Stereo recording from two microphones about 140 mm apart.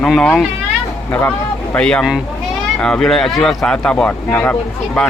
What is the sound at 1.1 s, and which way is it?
Speech, 15° left (ahead or behind).